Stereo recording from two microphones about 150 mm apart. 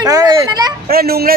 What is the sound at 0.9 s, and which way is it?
Speech, 90° right.